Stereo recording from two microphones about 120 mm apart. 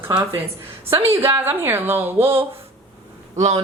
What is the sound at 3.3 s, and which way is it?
Speech, 70° right (ahead or behind).